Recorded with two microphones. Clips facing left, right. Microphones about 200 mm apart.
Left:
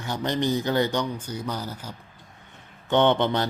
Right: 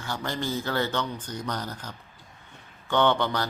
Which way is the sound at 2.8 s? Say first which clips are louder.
Left 3 dB; 20° left (ahead or behind).